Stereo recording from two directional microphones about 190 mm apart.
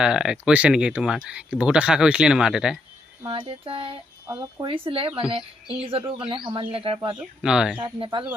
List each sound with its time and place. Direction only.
0.0 s speech: 5° right (ahead or behind)
3.2 s speech: 30° right (ahead or behind)
7.2 s speech: 5° right (ahead or behind)
7.8 s speech: 25° right (ahead or behind)